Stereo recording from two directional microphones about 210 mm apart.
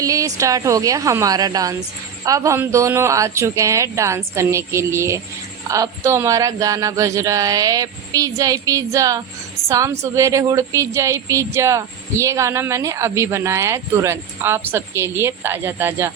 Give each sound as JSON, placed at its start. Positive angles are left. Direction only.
{"t": 0.0, "sound": "a woman's voice", "side_deg": -15}